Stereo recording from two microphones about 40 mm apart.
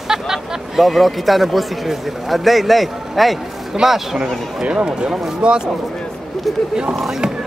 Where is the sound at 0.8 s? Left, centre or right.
Centre.